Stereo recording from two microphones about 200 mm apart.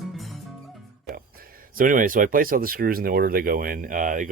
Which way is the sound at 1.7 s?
40° right (ahead or behind).